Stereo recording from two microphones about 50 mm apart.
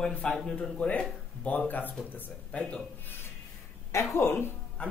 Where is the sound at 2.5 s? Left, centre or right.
Left.